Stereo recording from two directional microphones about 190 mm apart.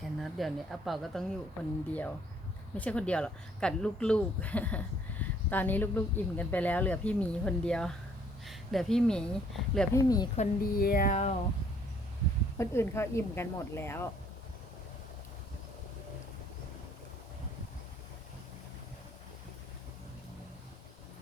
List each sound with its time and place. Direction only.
0.0 s a woman's voice: centre (ahead or behind)
9.9 s speech: 20° left (ahead or behind)
10.3 s speech: 45° left (ahead or behind)
12.5 s speech: 15° left (ahead or behind)